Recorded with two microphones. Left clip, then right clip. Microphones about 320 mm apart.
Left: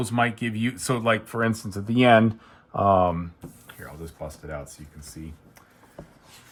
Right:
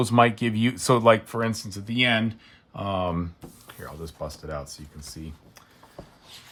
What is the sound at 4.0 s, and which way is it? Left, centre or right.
Speech, centre.